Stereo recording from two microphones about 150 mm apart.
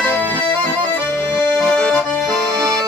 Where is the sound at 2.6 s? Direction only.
25° right (ahead or behind).